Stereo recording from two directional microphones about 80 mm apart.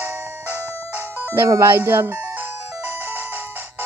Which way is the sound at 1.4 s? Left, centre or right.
Right.